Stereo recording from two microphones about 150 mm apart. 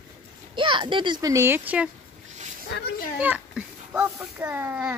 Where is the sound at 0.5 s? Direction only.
35° right (ahead or behind); by 1.9 s 10° right (ahead or behind).